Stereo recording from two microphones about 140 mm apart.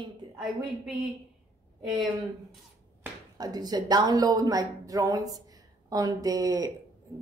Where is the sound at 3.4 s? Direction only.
30° right (ahead or behind).